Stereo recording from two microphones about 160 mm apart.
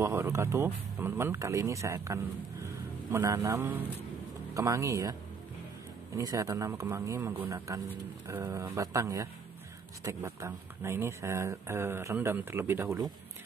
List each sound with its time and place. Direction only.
0.0 s speech: 15° right (ahead or behind)
6.1 s speech: 20° right (ahead or behind)